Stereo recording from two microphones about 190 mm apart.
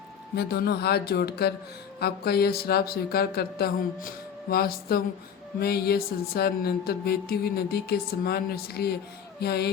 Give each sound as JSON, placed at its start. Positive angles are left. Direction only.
{"t": 0.3, "sound": "mantra", "side_deg": 55}